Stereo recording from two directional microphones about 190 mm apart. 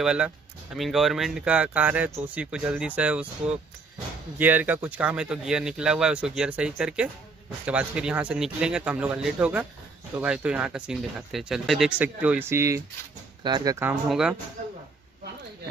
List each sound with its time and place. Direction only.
0.0 s speech: 5° right (ahead or behind)
4.4 s speech: 10° right (ahead or behind)
14.0 s speech: centre (ahead or behind)